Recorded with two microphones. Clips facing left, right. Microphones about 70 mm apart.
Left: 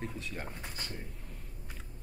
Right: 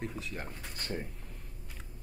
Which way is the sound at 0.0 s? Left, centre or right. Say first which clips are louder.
Right 1 dB; centre.